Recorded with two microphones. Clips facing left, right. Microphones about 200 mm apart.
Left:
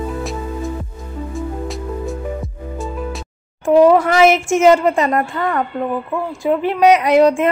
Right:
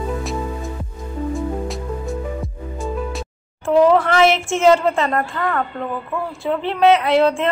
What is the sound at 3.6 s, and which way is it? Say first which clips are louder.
A woman's voice: left 3 dB; 15° left (ahead or behind).